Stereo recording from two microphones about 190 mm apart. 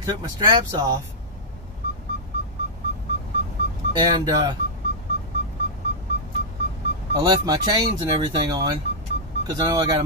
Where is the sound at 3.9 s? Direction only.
25° right (ahead or behind).